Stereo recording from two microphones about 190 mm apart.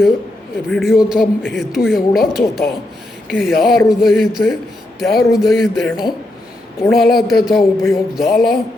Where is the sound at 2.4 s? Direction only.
50° left (ahead or behind).